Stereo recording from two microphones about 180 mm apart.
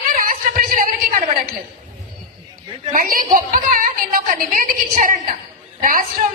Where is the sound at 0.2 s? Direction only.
50° right (ahead or behind).